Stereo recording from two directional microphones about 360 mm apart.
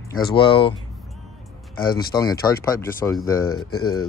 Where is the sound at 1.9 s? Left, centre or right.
Centre.